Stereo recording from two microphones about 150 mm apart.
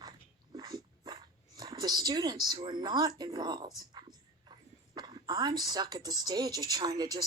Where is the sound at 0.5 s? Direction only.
25° right (ahead or behind).